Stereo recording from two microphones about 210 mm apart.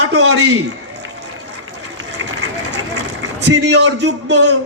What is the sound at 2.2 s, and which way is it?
Run, 85° right.